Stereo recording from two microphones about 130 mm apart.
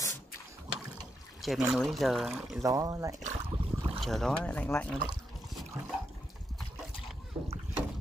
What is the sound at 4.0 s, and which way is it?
Speech, 5° left (ahead or behind).